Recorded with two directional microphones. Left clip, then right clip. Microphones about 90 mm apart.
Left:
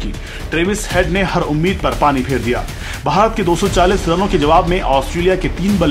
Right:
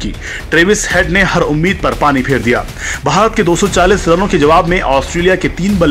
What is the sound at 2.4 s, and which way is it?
Speech, 30° right (ahead or behind).